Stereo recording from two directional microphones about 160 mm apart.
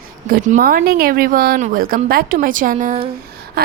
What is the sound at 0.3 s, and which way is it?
Speech, 55° right (ahead or behind).